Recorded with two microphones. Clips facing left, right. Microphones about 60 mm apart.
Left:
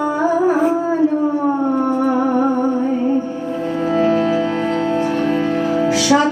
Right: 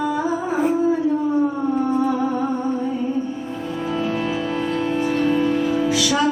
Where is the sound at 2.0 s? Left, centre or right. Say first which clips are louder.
Left 5 dB; left.